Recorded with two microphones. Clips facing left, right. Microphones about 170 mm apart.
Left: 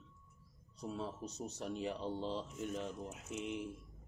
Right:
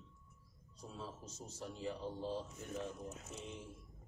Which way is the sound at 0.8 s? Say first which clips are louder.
Left 7 dB; 70° left (ahead or behind).